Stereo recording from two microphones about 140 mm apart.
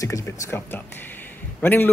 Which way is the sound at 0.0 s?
20° left (ahead or behind).